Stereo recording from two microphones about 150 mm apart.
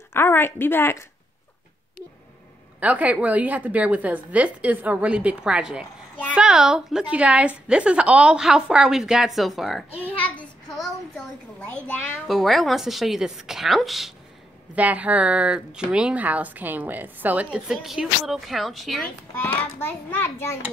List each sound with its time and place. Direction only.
0.1 s a woman's voice: 15° left (ahead or behind)
2.8 s a woman's voice: 10° right (ahead or behind)
10.1 s a child's voice: 10° left (ahead or behind)
19.8 s a woman's voice: 15° left (ahead or behind)